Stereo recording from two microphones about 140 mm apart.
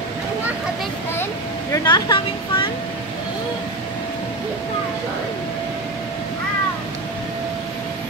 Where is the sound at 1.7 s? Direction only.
30° left (ahead or behind).